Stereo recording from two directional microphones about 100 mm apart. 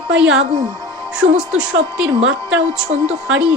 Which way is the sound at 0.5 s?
50° right (ahead or behind).